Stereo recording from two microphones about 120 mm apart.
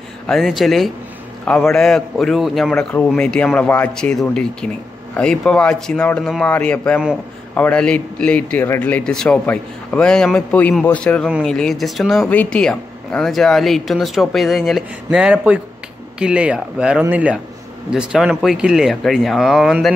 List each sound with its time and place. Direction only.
0.3 s a man's voice: centre (ahead or behind)
11.2 s speech: centre (ahead or behind)